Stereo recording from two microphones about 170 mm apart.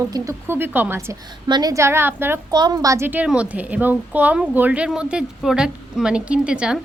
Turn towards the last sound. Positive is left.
turn(degrees=-5)  # may be behind; listen again after turning